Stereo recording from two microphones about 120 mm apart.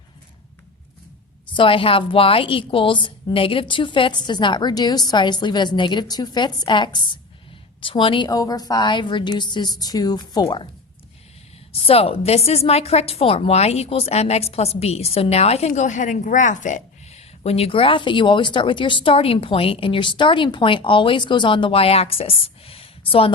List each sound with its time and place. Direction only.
1.5 s a woman's voice: 45° left (ahead or behind)
11.7 s a woman's voice: 55° left (ahead or behind)